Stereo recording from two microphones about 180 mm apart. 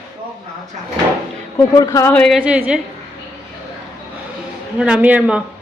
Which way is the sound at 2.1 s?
Centre (ahead or behind).